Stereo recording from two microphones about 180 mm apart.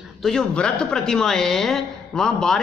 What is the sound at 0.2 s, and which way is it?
A woman's voice, 5° left (ahead or behind).